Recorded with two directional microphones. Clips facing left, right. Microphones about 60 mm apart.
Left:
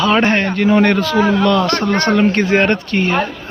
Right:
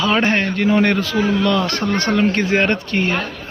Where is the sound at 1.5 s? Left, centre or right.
Left.